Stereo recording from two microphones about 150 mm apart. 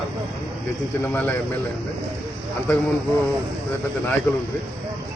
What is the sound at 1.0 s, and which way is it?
Speech, 10° left (ahead or behind).